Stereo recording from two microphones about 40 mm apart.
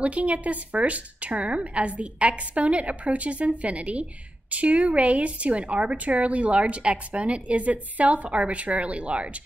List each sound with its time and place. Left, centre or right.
0.0 s a woman's voice: right